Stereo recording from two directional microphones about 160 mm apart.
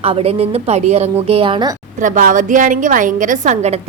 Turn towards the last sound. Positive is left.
turn(degrees=-50)  # may be behind; listen again after turning